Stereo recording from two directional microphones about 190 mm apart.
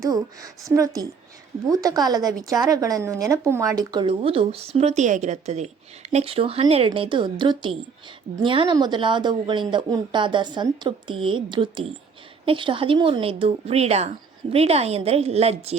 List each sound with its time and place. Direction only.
0.0 s a woman's voice: 15° right (ahead or behind); by 15.8 s 35° right (ahead or behind)